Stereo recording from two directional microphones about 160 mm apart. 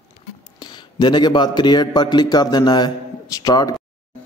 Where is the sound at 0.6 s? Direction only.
30° left (ahead or behind).